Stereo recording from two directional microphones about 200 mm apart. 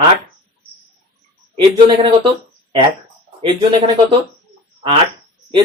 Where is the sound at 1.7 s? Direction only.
25° right (ahead or behind).